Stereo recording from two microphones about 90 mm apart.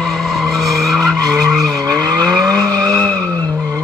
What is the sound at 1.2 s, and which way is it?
Vehicle, 40° right (ahead or behind).